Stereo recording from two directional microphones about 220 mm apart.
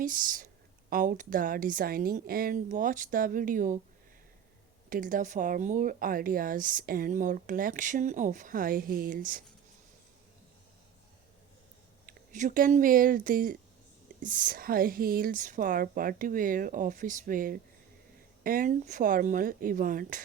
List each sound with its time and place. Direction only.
0.0 s speech: 40° right (ahead or behind)
4.9 s speech: 35° right (ahead or behind)
12.0 s speech: 35° right (ahead or behind)